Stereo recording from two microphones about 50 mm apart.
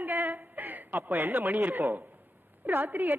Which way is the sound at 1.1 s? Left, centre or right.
Right.